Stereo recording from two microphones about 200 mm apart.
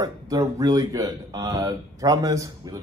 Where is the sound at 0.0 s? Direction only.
15° right (ahead or behind).